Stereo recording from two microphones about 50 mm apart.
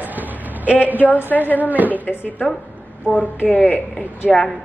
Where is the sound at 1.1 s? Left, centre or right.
Left.